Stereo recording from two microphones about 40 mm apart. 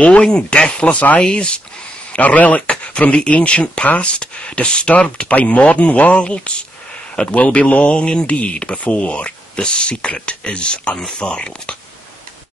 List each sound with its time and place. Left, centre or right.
0.0 s speech: left
0.3 s speech: left
2.1 s speech: left
5.3 s speech: left
8.1 s speech: left
8.7 s speech: left